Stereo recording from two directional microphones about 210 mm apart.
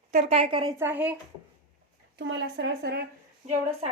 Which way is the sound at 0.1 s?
30° right (ahead or behind).